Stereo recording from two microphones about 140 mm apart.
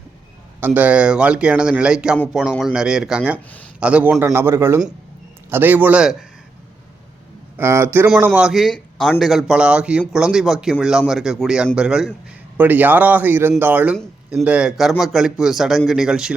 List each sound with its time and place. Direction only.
0.6 s a man's voice: 10° right (ahead or behind)
3.3 s speech: 10° left (ahead or behind)
3.8 s a man's voice: 10° right (ahead or behind)
7.5 s a man's voice: 15° right (ahead or behind)